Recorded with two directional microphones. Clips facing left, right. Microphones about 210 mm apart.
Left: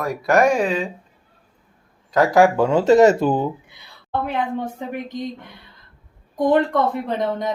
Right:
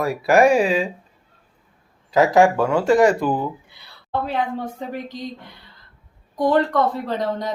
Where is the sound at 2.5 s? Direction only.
20° left (ahead or behind).